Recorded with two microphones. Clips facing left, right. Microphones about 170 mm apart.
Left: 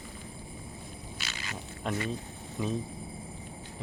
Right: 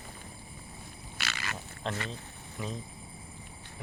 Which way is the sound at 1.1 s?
70° right (ahead or behind).